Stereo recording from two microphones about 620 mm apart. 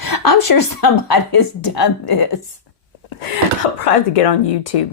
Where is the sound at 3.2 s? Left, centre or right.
Left.